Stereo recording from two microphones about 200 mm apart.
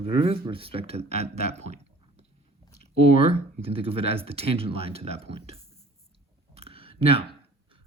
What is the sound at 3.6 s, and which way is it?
Speech, 30° right (ahead or behind).